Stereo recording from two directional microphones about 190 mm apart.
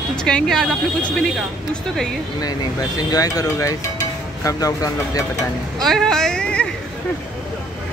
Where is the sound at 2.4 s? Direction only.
20° left (ahead or behind).